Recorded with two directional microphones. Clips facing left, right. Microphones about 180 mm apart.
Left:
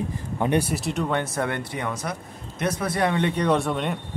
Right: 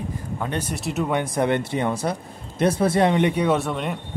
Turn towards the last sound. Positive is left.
turn(degrees=0)  # may be behind; listen again after turning